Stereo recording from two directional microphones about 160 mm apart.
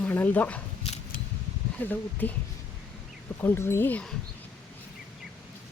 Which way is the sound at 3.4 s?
15° left (ahead or behind).